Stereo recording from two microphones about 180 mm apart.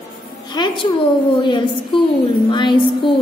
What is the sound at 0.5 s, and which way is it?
A woman's voice, 25° left (ahead or behind).